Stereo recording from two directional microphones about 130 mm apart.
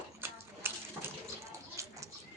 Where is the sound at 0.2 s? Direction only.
20° right (ahead or behind).